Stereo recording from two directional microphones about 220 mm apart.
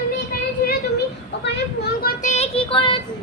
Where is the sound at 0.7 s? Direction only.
50° left (ahead or behind).